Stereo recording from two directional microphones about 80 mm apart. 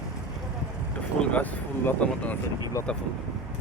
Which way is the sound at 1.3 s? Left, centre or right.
Centre.